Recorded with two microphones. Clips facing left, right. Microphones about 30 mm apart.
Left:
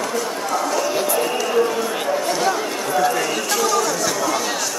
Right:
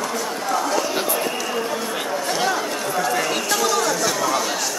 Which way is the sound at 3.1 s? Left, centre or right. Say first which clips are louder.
Even; right.